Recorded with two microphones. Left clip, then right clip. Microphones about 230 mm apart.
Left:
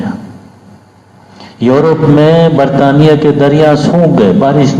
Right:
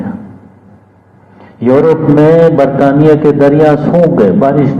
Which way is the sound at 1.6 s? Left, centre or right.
Left.